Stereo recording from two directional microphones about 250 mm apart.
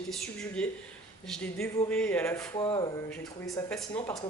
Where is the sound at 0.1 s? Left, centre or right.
Centre.